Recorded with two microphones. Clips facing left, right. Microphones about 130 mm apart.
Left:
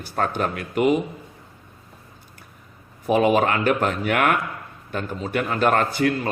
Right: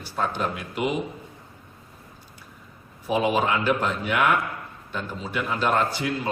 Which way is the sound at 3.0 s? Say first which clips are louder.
Left 5 dB; 55° left (ahead or behind).